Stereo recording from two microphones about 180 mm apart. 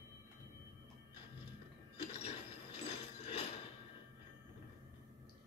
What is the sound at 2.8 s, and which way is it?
Ratchet, 35° left (ahead or behind).